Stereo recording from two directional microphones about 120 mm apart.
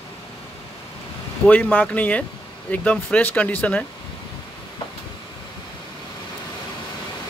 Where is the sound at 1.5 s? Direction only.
15° left (ahead or behind).